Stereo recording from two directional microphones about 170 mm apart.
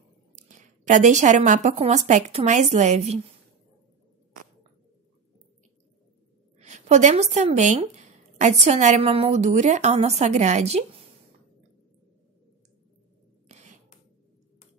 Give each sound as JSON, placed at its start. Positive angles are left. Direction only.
{"t": 0.4, "sound": "speech", "side_deg": -45}
{"t": 6.6, "sound": "speech", "side_deg": -45}
{"t": 13.5, "sound": "a sound", "side_deg": -40}